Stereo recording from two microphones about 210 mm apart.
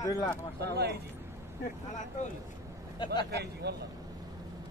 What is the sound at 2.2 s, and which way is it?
Speech, 35° left (ahead or behind).